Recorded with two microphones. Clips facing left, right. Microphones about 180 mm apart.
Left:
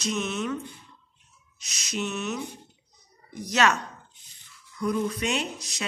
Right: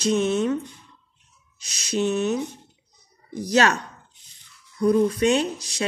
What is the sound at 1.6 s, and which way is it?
Speech, 30° right (ahead or behind).